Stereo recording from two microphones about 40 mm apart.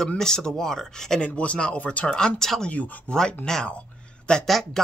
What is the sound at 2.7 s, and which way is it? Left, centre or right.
Speech, left.